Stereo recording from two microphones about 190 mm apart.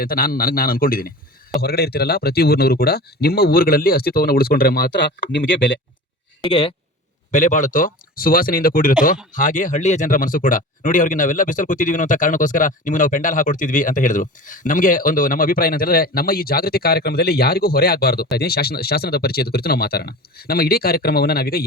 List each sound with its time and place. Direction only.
0.0 s speech: 50° left (ahead or behind); by 5.8 s 75° left (ahead or behind)
6.4 s speech: 30° left (ahead or behind)
7.3 s speech: 40° left (ahead or behind)